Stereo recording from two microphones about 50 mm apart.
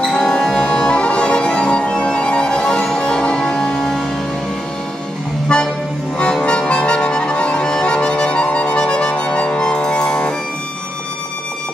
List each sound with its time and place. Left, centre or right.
0.0 s music: centre
5.5 s music: centre